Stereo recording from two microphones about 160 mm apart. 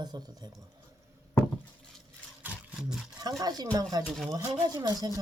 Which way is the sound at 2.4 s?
5° right (ahead or behind).